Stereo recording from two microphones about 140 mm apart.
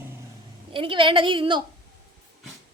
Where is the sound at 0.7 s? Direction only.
40° right (ahead or behind).